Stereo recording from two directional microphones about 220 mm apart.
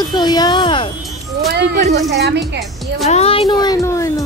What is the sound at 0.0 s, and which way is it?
Speech, 20° left (ahead or behind).